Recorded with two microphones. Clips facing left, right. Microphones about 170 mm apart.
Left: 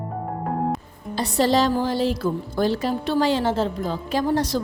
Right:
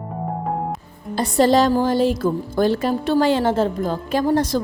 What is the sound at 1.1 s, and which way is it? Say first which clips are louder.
A woman's voice: right 4 dB; 50° right (ahead or behind).